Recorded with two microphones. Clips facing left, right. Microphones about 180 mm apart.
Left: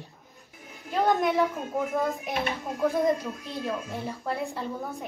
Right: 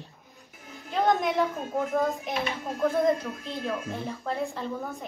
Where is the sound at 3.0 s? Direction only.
15° left (ahead or behind).